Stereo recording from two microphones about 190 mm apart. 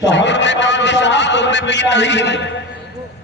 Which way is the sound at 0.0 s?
70° left (ahead or behind).